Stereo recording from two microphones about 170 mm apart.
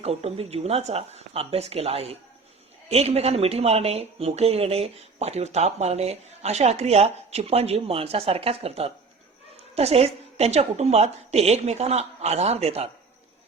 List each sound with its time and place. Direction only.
0.0 s speech: 35° right (ahead or behind)